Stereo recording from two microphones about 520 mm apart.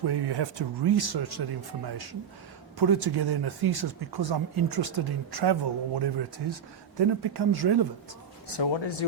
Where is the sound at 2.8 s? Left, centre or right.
Right.